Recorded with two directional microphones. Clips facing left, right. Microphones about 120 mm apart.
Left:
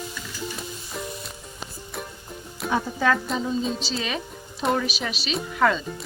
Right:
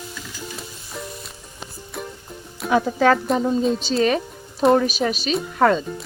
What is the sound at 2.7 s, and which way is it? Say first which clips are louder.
A woman's voice: right 6 dB; 75° right (ahead or behind).